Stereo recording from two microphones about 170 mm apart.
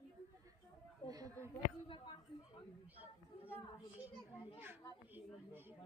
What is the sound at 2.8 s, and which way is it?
Chatter, 10° right (ahead or behind).